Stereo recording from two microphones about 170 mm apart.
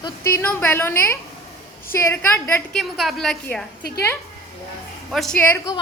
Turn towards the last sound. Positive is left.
turn(degrees=10)  # may be behind; listen again after turning